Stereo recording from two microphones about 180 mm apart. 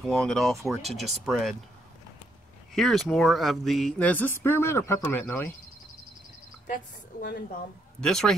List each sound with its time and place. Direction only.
0.0 s speech: 5° left (ahead or behind)
2.7 s speech: centre (ahead or behind)
6.7 s a woman's voice: 50° left (ahead or behind)
8.0 s speech: 5° left (ahead or behind)